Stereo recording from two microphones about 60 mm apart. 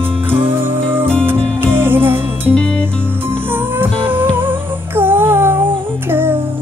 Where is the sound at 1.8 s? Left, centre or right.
Right.